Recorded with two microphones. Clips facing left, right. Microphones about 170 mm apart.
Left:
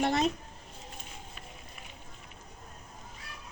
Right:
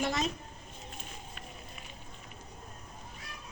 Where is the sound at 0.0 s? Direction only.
60° left (ahead or behind).